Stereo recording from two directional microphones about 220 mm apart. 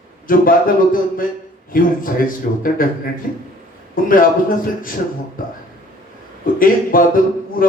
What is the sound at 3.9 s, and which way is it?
Speech, 40° left (ahead or behind).